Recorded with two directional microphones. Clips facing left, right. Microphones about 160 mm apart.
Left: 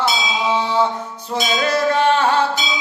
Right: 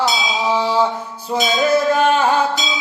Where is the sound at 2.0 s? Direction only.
10° right (ahead or behind).